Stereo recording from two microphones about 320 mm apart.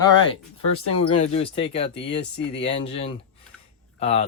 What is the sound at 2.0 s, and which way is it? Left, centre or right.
Speech, left.